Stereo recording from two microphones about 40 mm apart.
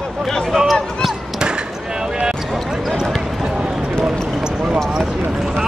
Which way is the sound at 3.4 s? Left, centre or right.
Right.